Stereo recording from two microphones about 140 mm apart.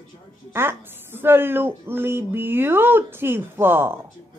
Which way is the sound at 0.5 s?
15° right (ahead or behind).